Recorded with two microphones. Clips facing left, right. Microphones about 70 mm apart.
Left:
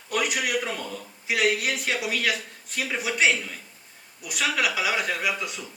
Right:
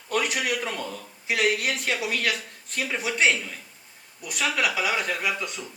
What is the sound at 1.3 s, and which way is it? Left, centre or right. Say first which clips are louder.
Speech: even; right.